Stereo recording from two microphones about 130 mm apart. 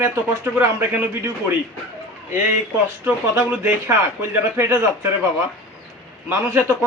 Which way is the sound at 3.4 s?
15° right (ahead or behind).